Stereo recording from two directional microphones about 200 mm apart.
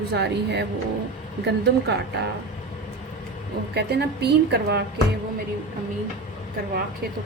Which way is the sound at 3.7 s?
55° right (ahead or behind).